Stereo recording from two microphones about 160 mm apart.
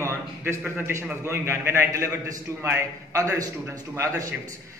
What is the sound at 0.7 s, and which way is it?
A man's voice, 15° right (ahead or behind).